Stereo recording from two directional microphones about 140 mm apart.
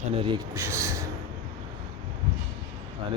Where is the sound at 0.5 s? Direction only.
20° right (ahead or behind).